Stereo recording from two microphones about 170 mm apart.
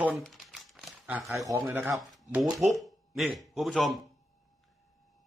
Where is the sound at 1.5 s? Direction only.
20° right (ahead or behind).